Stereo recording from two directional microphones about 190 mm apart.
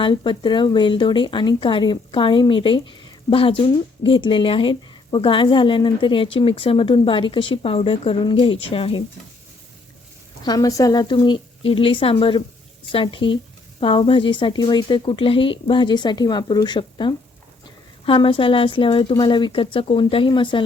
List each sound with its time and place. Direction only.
0.0 s speech: 25° left (ahead or behind)
10.4 s speech: 20° left (ahead or behind)